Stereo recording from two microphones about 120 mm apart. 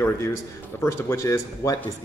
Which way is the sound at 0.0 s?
20° left (ahead or behind).